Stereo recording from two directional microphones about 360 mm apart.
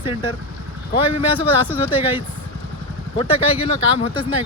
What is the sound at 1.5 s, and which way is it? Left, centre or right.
Speech, centre.